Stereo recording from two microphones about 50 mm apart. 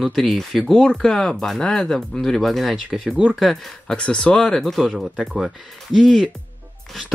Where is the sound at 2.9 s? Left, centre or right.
Centre.